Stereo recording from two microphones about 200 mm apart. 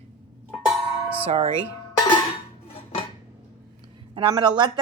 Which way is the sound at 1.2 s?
30° right (ahead or behind).